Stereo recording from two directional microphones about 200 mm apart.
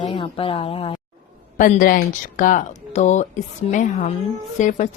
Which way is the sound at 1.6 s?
40° left (ahead or behind).